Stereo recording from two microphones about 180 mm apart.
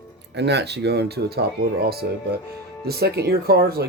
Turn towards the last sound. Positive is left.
turn(degrees=-60)  # may be behind; listen again after turning